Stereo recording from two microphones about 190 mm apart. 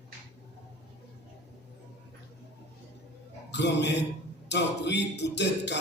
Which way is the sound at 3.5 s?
65° left (ahead or behind).